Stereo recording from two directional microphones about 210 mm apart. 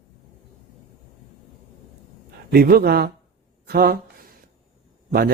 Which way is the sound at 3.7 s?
45° right (ahead or behind).